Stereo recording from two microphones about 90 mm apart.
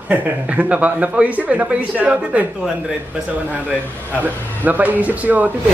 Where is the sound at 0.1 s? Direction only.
15° right (ahead or behind).